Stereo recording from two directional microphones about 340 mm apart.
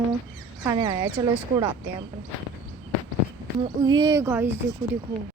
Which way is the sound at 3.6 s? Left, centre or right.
Centre.